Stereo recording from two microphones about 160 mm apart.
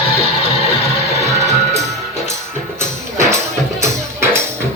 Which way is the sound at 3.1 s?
20° right (ahead or behind).